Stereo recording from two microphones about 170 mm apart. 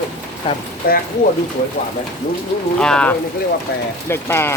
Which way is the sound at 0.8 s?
60° left (ahead or behind).